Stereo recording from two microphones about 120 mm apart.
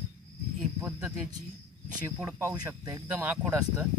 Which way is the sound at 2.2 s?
20° right (ahead or behind).